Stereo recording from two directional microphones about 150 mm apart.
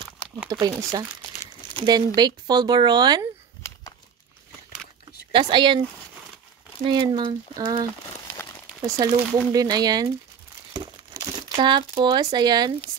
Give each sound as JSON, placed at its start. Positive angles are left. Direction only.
{"t": 0.5, "sound": "speech", "side_deg": -25}
{"t": 5.3, "sound": "speech", "side_deg": -35}
{"t": 6.9, "sound": "speech", "side_deg": -30}
{"t": 8.6, "sound": "speech", "side_deg": -20}
{"t": 11.5, "sound": "speech", "side_deg": -35}